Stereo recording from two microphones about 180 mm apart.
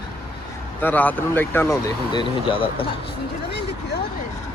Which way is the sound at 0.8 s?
10° left (ahead or behind).